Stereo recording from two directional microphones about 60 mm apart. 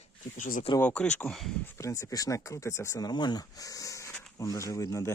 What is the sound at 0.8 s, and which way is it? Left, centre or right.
Speech, centre.